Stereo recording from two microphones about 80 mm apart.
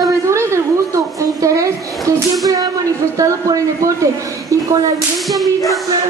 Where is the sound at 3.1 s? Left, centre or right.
Right.